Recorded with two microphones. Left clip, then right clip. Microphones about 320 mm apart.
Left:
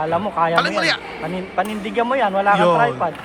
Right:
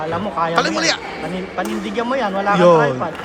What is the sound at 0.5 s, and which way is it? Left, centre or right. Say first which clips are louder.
Speech: even; centre.